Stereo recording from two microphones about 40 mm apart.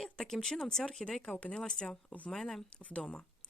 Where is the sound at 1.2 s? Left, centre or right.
Left.